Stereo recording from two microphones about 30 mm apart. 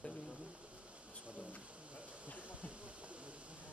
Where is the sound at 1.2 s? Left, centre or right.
Right.